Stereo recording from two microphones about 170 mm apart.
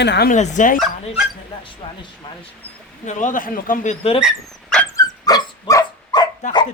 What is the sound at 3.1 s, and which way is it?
Speech, 50° left (ahead or behind).